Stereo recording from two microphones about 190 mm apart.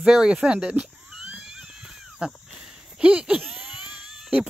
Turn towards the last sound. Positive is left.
turn(degrees=0)  # may be behind; listen again after turning